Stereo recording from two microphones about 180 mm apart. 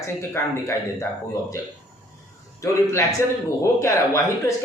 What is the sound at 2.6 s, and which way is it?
Speech, 15° left (ahead or behind).